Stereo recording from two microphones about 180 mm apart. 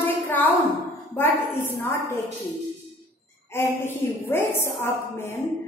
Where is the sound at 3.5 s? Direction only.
15° left (ahead or behind).